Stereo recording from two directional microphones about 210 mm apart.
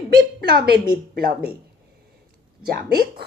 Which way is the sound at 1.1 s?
45° right (ahead or behind).